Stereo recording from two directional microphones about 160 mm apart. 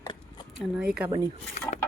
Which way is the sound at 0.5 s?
5° right (ahead or behind).